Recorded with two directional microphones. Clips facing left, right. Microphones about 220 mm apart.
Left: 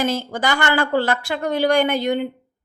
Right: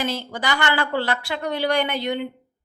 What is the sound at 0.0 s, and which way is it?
A woman's voice, 45° left (ahead or behind).